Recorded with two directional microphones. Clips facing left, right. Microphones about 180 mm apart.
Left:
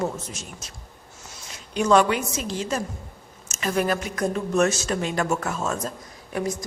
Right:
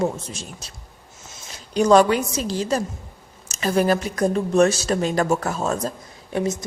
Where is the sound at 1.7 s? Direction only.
35° right (ahead or behind).